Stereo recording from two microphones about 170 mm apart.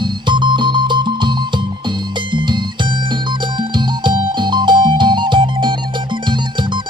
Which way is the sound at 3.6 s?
25° right (ahead or behind).